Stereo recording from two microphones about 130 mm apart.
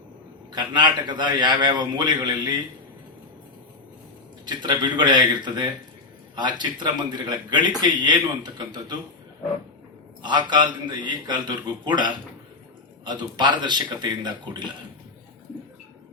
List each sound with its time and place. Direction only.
0.5 s a man's voice: 35° right (ahead or behind)
4.4 s a man's voice: 35° right (ahead or behind)
10.2 s a man's voice: 35° right (ahead or behind)